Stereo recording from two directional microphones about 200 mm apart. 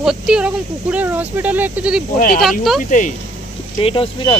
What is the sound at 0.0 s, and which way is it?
Speech, 5° right (ahead or behind).